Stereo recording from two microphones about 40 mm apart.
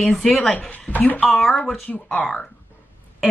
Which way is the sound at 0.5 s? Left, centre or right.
Left.